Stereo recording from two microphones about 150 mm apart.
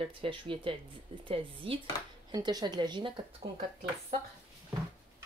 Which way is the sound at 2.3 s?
30° right (ahead or behind).